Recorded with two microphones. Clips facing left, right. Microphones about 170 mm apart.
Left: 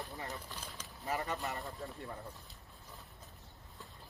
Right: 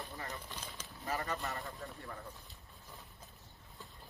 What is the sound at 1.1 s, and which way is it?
Speech, 20° left (ahead or behind).